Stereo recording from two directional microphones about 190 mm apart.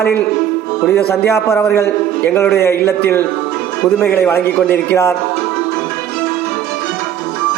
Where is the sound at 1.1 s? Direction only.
15° left (ahead or behind).